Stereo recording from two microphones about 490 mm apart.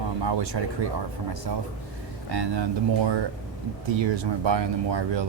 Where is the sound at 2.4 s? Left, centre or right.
Right.